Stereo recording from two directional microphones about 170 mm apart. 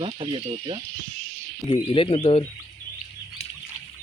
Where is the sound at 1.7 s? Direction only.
30° left (ahead or behind).